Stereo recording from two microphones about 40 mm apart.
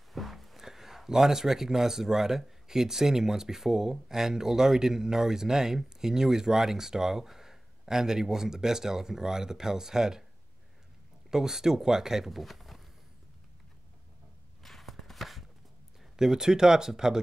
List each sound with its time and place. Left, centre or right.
0.1 s speech: centre
11.2 s speech: centre
12.3 s speech: centre
14.6 s chopping: centre
16.2 s speech: centre